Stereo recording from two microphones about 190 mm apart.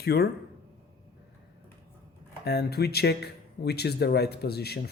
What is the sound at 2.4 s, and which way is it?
Speech, 60° left (ahead or behind).